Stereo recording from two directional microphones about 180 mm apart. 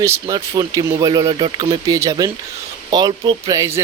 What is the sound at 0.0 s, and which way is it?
Speech, 20° right (ahead or behind).